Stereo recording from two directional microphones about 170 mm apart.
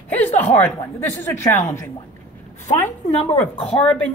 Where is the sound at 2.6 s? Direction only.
40° left (ahead or behind).